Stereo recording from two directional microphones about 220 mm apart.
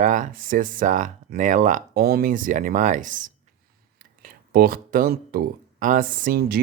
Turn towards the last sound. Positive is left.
turn(degrees=-45)  # may be behind; listen again after turning